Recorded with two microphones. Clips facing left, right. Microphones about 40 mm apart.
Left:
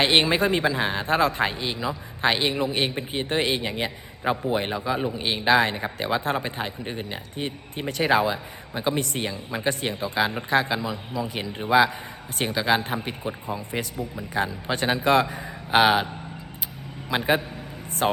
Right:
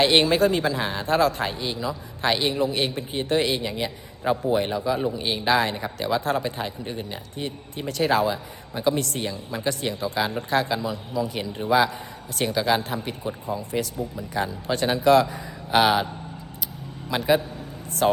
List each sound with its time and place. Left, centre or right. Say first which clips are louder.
0.0 s a man's voice: right 2 dB; left
4.2 s a man's voice: right 2 dB; left
4.5 s speech: right 2 dB; left
4.9 s a man's voice: right 1 dB; centre
5.2 s a man's voice: left 3 dB; left
6.9 s a man's voice: even; left
17.1 s a man's voice: right 1 dB; left